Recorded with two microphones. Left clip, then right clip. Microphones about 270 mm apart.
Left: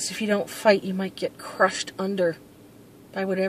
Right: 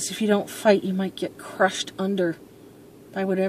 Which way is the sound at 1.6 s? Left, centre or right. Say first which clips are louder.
Even; centre.